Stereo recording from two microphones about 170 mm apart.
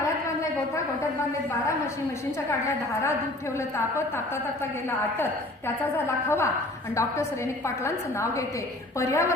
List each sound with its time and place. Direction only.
3.6 s a woman's voice: 15° left (ahead or behind)